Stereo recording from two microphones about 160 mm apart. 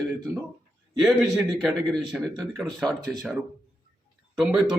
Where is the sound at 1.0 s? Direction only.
Centre (ahead or behind).